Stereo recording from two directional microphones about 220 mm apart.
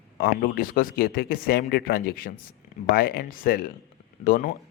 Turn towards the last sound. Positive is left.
turn(degrees=40)  # may be behind; listen again after turning